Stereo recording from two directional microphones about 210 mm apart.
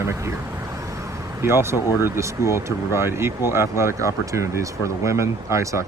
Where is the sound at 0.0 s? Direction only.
15° right (ahead or behind).